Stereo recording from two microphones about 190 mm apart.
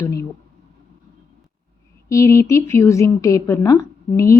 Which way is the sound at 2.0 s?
15° left (ahead or behind).